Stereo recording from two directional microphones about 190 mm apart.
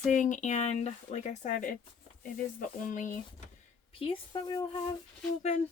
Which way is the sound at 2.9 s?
40° left (ahead or behind).